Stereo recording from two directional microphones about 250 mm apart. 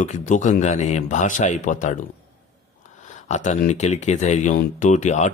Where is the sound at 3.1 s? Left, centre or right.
Left.